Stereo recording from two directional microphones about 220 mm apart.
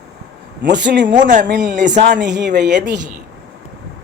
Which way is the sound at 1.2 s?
35° right (ahead or behind).